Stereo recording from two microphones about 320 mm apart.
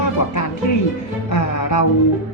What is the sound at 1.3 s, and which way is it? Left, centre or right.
Music, left.